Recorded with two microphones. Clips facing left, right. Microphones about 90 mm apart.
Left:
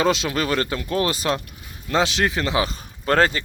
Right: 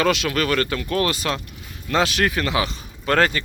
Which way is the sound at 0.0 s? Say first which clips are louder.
Even; 25° left (ahead or behind).